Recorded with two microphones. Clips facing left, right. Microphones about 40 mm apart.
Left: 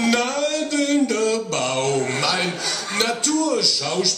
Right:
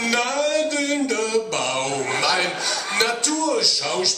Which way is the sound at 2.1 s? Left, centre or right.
Right.